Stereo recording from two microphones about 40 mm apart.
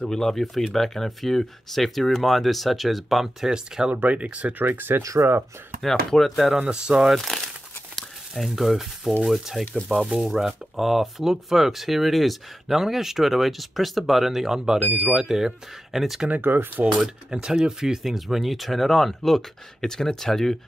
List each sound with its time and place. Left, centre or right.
0.0 s speech: centre
3.4 s speech: centre
4.1 s speech: right
4.6 s speech: right
5.8 s speech: centre
6.7 s speech: centre
7.2 s crumpling: centre
8.5 s speech: centre
9.9 s speech: centre
10.2 s speech: centre
16.3 s speech: right
17.0 s speech: centre